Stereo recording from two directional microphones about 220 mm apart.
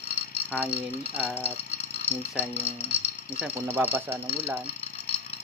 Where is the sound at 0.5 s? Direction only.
5° right (ahead or behind).